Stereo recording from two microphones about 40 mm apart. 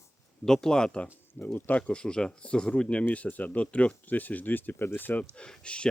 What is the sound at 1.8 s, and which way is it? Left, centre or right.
Speech, left.